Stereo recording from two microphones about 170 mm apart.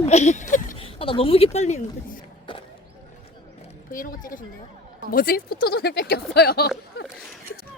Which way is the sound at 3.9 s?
55° left (ahead or behind).